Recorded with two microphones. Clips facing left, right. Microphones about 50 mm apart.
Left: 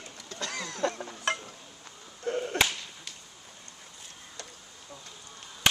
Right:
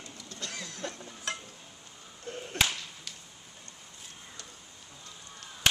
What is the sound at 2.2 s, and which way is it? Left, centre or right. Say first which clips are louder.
Whip: left 10 dB; left.